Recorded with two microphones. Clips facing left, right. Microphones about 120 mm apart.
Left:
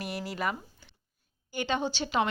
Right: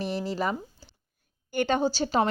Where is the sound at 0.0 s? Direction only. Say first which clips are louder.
Right 4 dB; 30° right (ahead or behind).